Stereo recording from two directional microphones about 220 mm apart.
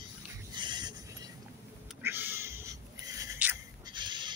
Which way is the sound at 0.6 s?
20° right (ahead or behind).